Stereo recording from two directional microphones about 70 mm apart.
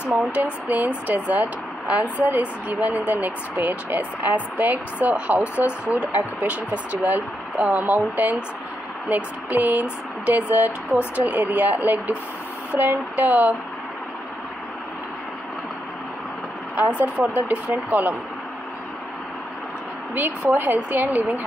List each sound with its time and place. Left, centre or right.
0.1 s speech: right
17.4 s speech: right
20.2 s speech: right